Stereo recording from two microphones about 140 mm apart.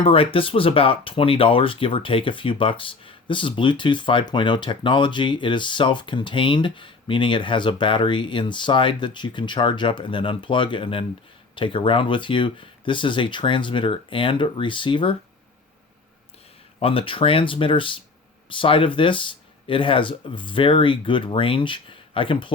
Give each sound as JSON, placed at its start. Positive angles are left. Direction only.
{"t": 0.0, "sound": "speech", "side_deg": 40}
{"t": 16.8, "sound": "speech", "side_deg": 40}